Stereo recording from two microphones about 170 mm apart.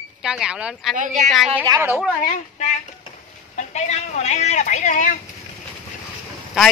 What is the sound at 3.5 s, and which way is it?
Speech, 40° left (ahead or behind).